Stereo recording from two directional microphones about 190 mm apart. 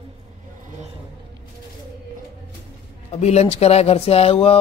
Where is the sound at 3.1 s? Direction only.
35° left (ahead or behind).